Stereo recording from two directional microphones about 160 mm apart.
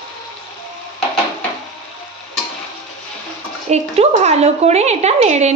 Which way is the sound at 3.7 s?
45° right (ahead or behind).